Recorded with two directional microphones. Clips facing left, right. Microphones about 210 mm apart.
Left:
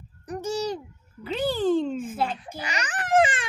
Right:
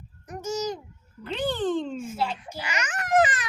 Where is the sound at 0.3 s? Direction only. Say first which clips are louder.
Left 2 dB; 30° left (ahead or behind).